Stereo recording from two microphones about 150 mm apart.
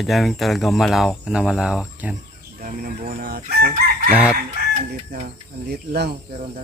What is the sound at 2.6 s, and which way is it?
Speech, 60° right (ahead or behind).